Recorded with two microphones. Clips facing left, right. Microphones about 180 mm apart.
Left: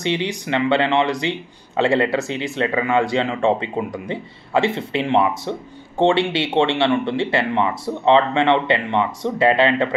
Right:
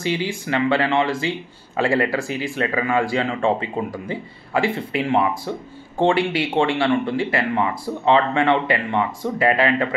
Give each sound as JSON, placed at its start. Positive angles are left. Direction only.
{"t": 0.0, "sound": "speech", "side_deg": 20}